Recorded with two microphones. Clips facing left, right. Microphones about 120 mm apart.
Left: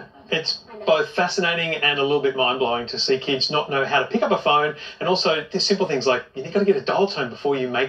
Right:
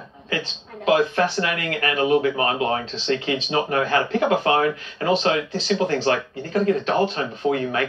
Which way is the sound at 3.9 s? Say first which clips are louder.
Even; 25° left (ahead or behind).